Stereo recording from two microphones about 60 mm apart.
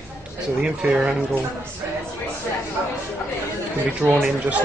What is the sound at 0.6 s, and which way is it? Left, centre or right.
Speech, centre.